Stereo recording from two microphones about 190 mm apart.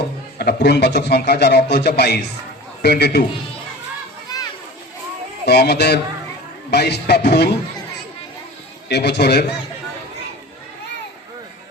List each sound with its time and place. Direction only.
0.3 s a man's voice: 60° left (ahead or behind)
4.3 s children playing: 20° left (ahead or behind)
5.5 s a man's voice: 60° left (ahead or behind)
8.9 s a man's voice: 60° left (ahead or behind)